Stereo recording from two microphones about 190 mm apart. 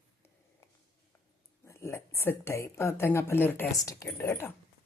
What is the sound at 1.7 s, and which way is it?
A woman's voice, 15° left (ahead or behind).